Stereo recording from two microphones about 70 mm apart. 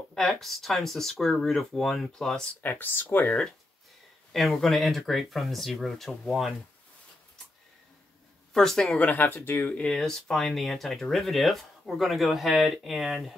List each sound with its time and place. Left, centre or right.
0.1 s speech: centre
2.6 s speech: left
4.3 s speech: centre
8.5 s speech: centre
9.2 s speech: left
9.7 s speech: centre